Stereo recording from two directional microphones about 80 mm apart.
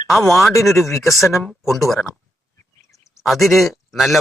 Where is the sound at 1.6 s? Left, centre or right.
Centre.